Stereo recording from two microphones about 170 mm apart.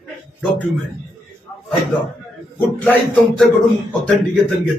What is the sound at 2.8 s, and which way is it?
Speech, 5° left (ahead or behind).